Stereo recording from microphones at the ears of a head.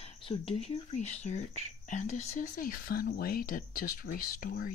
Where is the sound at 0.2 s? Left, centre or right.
Left.